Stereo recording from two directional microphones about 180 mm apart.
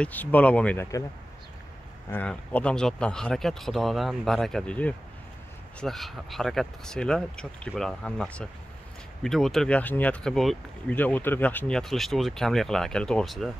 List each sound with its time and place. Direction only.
0.0 s speech: 10° left (ahead or behind)
2.0 s speech: 10° left (ahead or behind)